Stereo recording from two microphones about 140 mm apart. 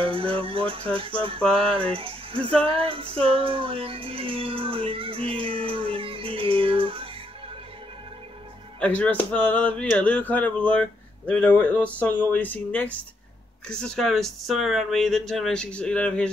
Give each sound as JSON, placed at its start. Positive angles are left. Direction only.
{"t": 0.0, "sound": "speech", "side_deg": -40}
{"t": 2.6, "sound": "music", "side_deg": -40}
{"t": 8.7, "sound": "speech", "side_deg": 10}